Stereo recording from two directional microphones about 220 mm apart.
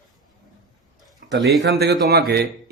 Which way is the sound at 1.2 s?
45° right (ahead or behind).